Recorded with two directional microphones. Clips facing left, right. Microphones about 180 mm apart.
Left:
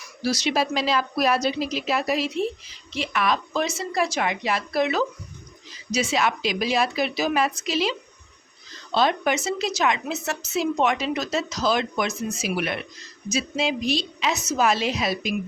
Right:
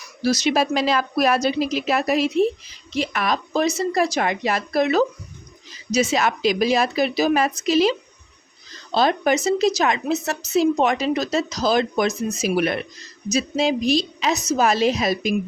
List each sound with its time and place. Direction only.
0.2 s speech: 45° right (ahead or behind)
2.9 s speech: 40° right (ahead or behind)